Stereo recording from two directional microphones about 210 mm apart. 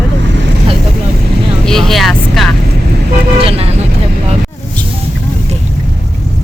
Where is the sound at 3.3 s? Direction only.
25° right (ahead or behind).